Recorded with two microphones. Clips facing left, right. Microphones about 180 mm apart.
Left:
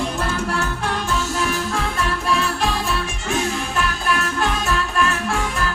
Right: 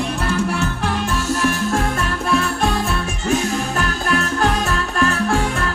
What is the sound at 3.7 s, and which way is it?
Music, 35° right (ahead or behind).